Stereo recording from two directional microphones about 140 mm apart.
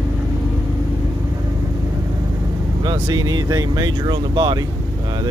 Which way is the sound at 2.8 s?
30° right (ahead or behind).